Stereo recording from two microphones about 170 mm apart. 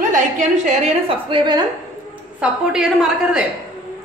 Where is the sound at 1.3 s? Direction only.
25° right (ahead or behind).